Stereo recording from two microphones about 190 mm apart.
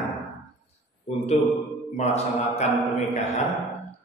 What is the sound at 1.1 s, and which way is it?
A man's voice, 35° left (ahead or behind).